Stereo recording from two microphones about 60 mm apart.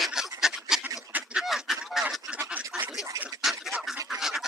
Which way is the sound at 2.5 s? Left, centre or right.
Right.